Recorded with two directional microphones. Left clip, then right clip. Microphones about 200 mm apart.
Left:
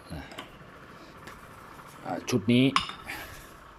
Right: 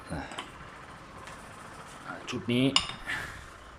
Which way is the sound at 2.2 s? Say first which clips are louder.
Left 6 dB; 25° left (ahead or behind).